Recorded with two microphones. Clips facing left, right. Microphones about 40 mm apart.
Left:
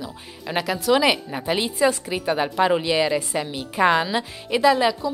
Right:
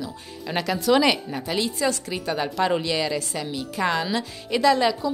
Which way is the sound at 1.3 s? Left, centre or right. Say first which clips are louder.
Left 2 dB; left.